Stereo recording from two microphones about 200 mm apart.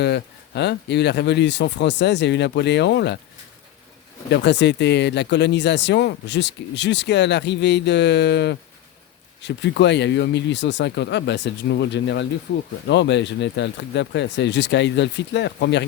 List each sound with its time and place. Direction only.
0.0 s speech: 60° left (ahead or behind)
4.3 s speech: 60° left (ahead or behind)